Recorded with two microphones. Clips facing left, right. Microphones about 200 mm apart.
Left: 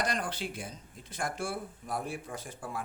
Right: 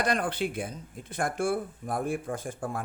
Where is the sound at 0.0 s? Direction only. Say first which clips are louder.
Right 6 dB; 55° right (ahead or behind).